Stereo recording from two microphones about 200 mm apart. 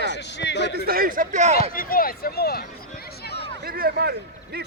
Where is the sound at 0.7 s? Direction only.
50° right (ahead or behind); by 1.7 s 35° right (ahead or behind).